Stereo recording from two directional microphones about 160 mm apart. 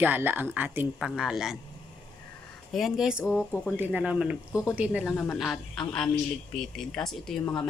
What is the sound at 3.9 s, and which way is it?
Speech, 5° right (ahead or behind).